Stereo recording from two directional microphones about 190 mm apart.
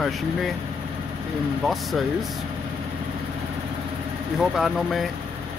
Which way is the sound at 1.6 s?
Centre (ahead or behind).